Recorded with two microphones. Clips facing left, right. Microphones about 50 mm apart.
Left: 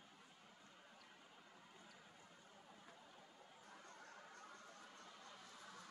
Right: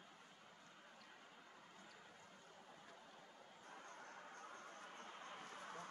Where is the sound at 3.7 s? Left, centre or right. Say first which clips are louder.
Right 4 dB; right.